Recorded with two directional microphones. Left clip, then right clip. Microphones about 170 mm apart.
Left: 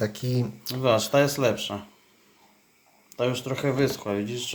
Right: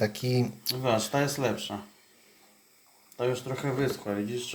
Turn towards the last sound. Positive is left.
turn(degrees=55)  # may be behind; listen again after turning